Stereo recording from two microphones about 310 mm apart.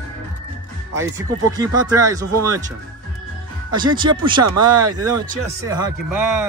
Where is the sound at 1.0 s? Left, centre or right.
Centre.